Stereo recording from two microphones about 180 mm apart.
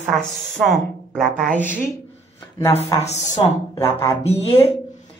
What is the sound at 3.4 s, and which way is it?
A woman's voice, 30° left (ahead or behind).